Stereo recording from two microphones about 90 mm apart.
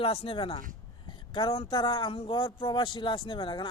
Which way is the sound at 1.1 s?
60° left (ahead or behind).